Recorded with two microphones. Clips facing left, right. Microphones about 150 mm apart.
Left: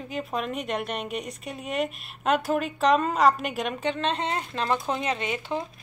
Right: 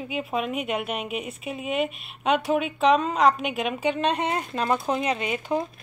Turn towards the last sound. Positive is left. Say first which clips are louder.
# right 3 dB
turn(degrees=-15)  # may be behind; listen again after turning